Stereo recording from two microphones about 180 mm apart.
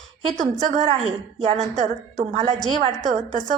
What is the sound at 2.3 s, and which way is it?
A woman's voice, 40° right (ahead or behind).